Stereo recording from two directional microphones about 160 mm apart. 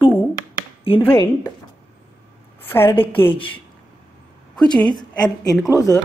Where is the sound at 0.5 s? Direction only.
35° left (ahead or behind).